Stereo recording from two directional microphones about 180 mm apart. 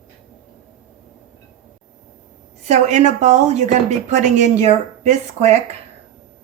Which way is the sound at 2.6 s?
40° right (ahead or behind).